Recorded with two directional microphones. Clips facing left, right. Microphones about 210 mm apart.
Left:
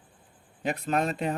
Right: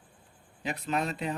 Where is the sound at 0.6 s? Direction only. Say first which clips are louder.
Left 4 dB; 45° left (ahead or behind).